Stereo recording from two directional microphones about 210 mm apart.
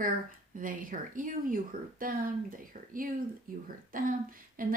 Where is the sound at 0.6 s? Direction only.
40° right (ahead or behind).